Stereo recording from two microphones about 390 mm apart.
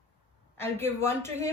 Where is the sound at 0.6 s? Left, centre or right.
Centre.